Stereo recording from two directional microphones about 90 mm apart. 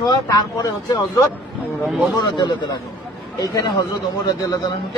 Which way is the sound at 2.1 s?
55° left (ahead or behind).